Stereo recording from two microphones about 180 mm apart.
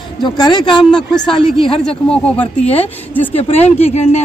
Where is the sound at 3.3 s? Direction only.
35° left (ahead or behind).